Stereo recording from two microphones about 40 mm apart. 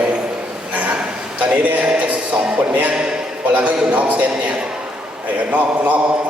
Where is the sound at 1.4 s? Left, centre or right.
Right.